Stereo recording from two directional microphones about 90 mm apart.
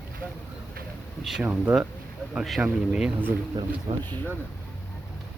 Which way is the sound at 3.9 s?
60° right (ahead or behind).